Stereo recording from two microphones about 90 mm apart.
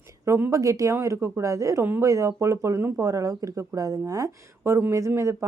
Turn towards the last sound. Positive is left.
turn(degrees=-30)  # may be behind; listen again after turning